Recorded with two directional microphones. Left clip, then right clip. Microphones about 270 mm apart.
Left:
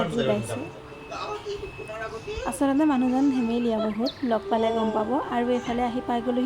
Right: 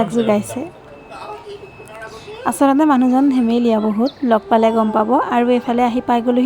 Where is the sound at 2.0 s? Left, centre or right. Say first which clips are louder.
Right 11 dB; right.